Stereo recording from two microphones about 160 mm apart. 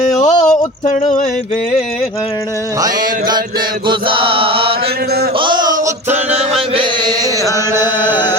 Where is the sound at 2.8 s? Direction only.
25° right (ahead or behind).